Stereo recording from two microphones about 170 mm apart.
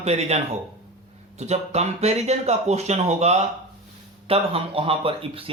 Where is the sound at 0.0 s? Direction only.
40° right (ahead or behind).